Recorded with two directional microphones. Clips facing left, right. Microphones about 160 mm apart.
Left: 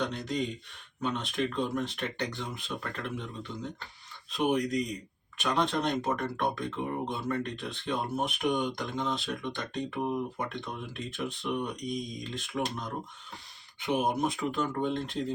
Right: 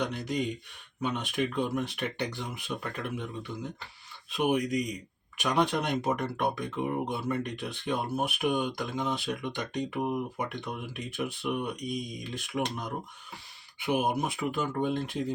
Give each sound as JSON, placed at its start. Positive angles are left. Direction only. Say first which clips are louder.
{"t": 0.0, "sound": "speech", "louder": "right 1 dB", "side_deg": -10}
{"t": 4.3, "sound": "speech", "louder": "right 1 dB", "side_deg": -10}